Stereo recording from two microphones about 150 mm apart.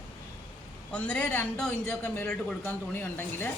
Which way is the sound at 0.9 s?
10° left (ahead or behind).